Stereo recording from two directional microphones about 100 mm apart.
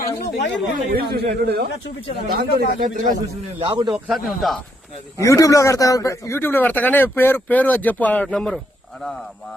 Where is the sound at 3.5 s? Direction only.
55° right (ahead or behind).